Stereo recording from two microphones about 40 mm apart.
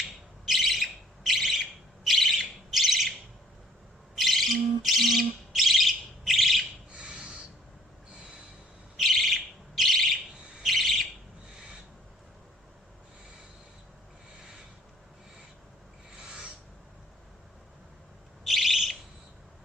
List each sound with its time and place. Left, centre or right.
0.4 s bird: centre
4.2 s bird: centre
6.9 s a sound: right
9.0 s bird: centre
16.1 s owl: right
18.4 s bird: centre